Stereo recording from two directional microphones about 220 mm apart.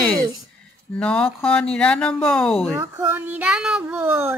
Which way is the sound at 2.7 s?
15° right (ahead or behind).